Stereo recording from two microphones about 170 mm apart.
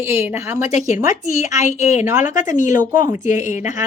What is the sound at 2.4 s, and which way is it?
Speech, 50° left (ahead or behind).